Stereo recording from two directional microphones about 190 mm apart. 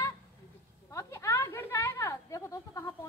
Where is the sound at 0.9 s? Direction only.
15° left (ahead or behind).